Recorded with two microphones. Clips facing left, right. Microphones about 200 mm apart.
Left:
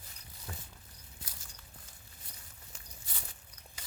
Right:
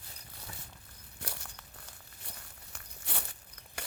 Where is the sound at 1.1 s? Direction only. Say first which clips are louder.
Right 10 dB; 70° right (ahead or behind).